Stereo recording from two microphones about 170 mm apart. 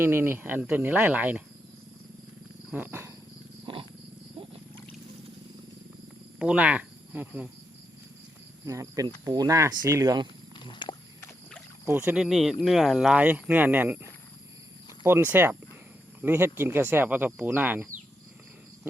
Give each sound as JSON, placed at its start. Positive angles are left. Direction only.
{"t": 0.0, "sound": "speech", "side_deg": -15}
{"t": 2.6, "sound": "wild animals", "side_deg": -10}
{"t": 6.4, "sound": "speech", "side_deg": -5}
{"t": 8.6, "sound": "speech", "side_deg": -20}
{"t": 10.5, "sound": "walk", "side_deg": 30}
{"t": 11.9, "sound": "speech", "side_deg": -10}